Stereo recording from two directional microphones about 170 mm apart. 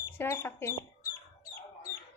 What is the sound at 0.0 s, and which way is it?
Speech, 15° left (ahead or behind).